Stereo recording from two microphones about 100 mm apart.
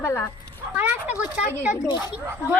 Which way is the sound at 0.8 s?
15° right (ahead or behind).